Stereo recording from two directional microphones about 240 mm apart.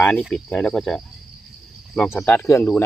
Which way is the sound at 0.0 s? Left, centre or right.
Centre.